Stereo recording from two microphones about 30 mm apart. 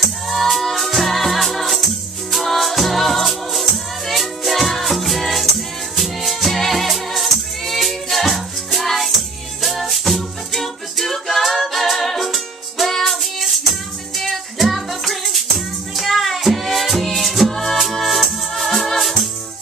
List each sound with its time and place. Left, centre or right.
0.3 s music: centre